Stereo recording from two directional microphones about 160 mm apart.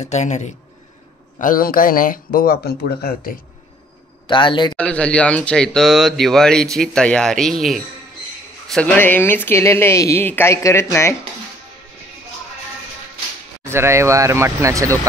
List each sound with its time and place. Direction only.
0.0 s speech: 45° left (ahead or behind)
1.4 s speech: 60° left (ahead or behind)
4.3 s a man's voice: 30° left (ahead or behind)
4.7 s speech: 5° left (ahead or behind)
13.7 s speech: 15° right (ahead or behind)